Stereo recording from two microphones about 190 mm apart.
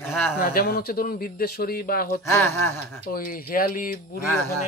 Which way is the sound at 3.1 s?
50° left (ahead or behind).